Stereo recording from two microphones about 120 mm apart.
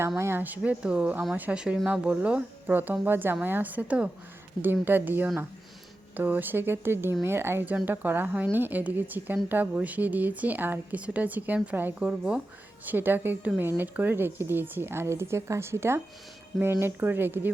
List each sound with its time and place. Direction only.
0.2 s a woman's voice: 20° right (ahead or behind)